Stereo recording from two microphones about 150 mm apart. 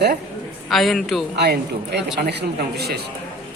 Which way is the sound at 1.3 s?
90° right.